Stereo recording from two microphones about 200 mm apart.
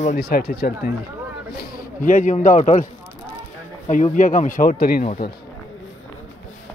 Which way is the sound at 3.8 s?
35° left (ahead or behind).